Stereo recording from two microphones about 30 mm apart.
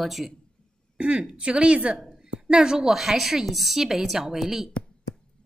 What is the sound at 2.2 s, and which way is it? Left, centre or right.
Speech, right.